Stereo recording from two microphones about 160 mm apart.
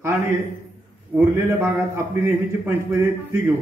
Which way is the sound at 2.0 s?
15° right (ahead or behind).